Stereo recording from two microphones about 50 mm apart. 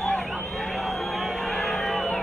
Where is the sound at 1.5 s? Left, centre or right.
Centre.